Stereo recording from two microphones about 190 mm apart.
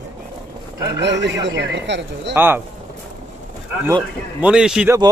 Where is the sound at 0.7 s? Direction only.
15° right (ahead or behind).